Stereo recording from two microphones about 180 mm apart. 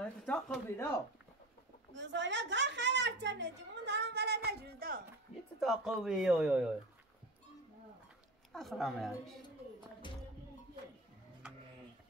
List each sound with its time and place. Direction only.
0.0 s speech: 5° left (ahead or behind)
2.0 s a sound: 80° right; by 4.4 s 65° right (ahead or behind)
4.5 s a man's voice: 60° right (ahead or behind)
5.6 s speech: centre (ahead or behind)
8.5 s speech: centre (ahead or behind)
10.0 s music: 25° left (ahead or behind)